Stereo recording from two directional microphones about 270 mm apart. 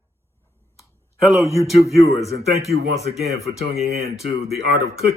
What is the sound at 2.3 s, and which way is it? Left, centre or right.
Speech, right.